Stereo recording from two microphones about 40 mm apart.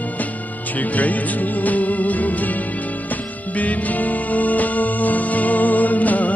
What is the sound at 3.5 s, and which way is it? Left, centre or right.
Music, left.